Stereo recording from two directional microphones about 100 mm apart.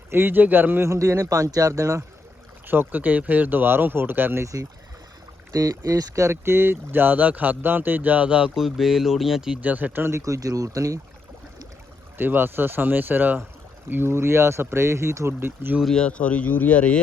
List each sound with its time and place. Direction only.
0.1 s speech: 20° right (ahead or behind)
2.6 s speech: 20° right (ahead or behind)
5.5 s speech: 35° right (ahead or behind); by 9.6 s 5° right (ahead or behind)
9.6 s speech: 15° right (ahead or behind); by 11.0 s 35° right (ahead or behind)
12.1 s speech: 20° right (ahead or behind)
15.8 s speech: 5° left (ahead or behind)